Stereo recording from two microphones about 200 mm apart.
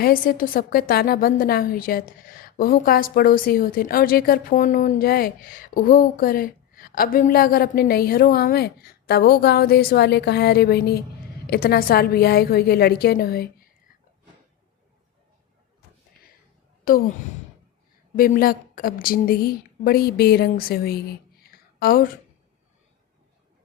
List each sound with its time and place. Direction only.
0.0 s a woman's voice: 45° left (ahead or behind)
16.9 s a woman's voice: 45° left (ahead or behind)
18.2 s a woman's voice: 45° left (ahead or behind)
21.4 s a sound: 50° left (ahead or behind)